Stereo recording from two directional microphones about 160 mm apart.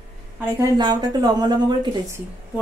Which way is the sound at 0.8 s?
25° right (ahead or behind).